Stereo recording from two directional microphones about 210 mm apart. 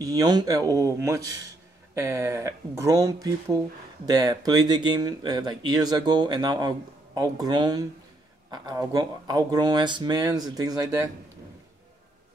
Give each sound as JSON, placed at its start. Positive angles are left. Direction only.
{"t": 0.0, "sound": "speech", "side_deg": -20}